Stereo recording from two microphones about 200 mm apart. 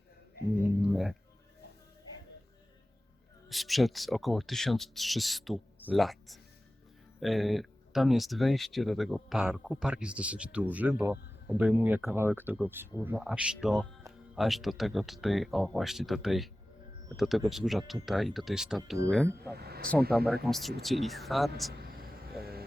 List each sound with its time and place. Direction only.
0.8 s music: centre (ahead or behind)
3.5 s speech: centre (ahead or behind)
19.5 s speech: 50° right (ahead or behind)
20.1 s speech: centre (ahead or behind)
21.7 s a sound: 50° right (ahead or behind)